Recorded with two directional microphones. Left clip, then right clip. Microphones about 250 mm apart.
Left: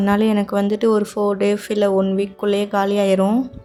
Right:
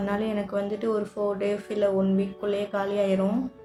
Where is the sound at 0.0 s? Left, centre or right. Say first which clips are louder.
Left 10 dB; left.